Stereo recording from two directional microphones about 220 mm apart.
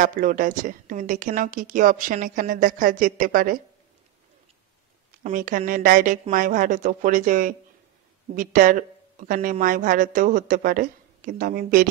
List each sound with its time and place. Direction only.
0.0 s speech: 40° right (ahead or behind)
5.2 s speech: 35° right (ahead or behind)